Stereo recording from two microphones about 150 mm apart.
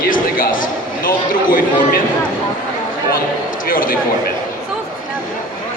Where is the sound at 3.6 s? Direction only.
70° left (ahead or behind).